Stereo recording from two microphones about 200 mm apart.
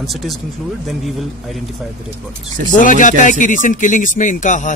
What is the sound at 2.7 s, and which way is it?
Speech, 40° left (ahead or behind).